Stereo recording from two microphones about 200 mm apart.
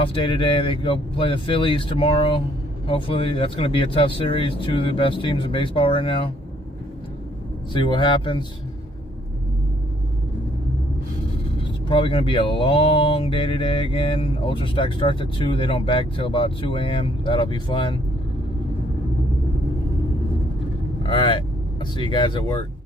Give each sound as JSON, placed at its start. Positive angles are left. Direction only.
{"t": 0.0, "sound": "mantra", "side_deg": 25}
{"t": 7.7, "sound": "mantra", "side_deg": 25}
{"t": 11.9, "sound": "mantra", "side_deg": 25}
{"t": 21.1, "sound": "mantra", "side_deg": 25}